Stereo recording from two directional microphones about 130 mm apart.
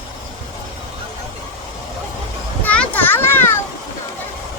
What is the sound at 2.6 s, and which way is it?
Children playing, 10° left (ahead or behind).